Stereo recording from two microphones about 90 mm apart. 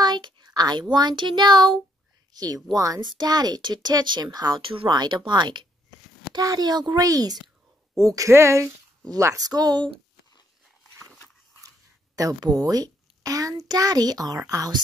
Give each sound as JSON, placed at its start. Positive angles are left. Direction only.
{"t": 0.0, "sound": "a child's voice", "side_deg": -55}
{"t": 4.6, "sound": "speech", "side_deg": -80}
{"t": 4.9, "sound": "speech", "side_deg": -60}
{"t": 6.3, "sound": "a child's voice", "side_deg": -45}
{"t": 9.5, "sound": "a child's voice", "side_deg": -50}
{"t": 12.2, "sound": "a child's voice", "side_deg": -45}